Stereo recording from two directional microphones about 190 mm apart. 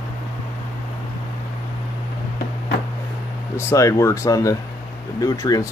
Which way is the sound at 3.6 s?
15° left (ahead or behind).